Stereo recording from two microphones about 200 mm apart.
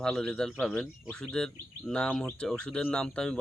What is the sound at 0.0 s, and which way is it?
Speech, 5° left (ahead or behind).